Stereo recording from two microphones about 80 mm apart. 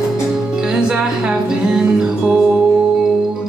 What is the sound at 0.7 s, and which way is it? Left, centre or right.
Music, centre.